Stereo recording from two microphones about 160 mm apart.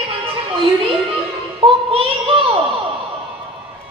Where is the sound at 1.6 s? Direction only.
35° right (ahead or behind).